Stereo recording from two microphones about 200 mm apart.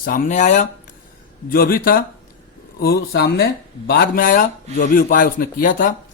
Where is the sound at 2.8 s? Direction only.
50° left (ahead or behind).